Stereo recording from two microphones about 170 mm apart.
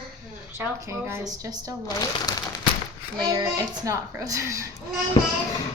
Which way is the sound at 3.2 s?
25° right (ahead or behind).